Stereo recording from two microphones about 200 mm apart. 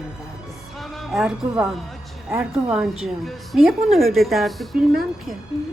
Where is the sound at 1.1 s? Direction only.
Centre (ahead or behind).